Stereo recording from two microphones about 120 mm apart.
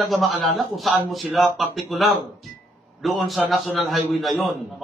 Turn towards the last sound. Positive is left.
turn(degrees=0)  # may be behind; listen again after turning